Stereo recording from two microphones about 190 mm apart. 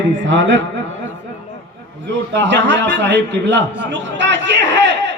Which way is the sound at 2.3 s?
70° right (ahead or behind).